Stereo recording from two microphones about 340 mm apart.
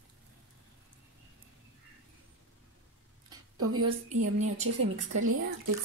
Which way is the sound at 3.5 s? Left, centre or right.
Right.